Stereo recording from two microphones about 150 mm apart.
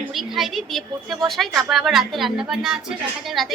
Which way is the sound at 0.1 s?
Centre (ahead or behind).